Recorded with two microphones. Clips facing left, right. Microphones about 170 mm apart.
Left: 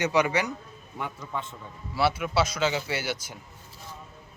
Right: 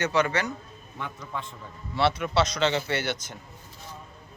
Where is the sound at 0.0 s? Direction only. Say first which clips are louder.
Left 1 dB; 15° left (ahead or behind).